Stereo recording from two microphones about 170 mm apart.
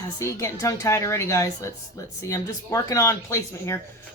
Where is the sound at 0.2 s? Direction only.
20° left (ahead or behind).